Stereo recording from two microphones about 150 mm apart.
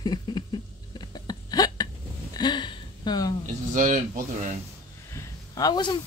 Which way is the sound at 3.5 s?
55° right (ahead or behind).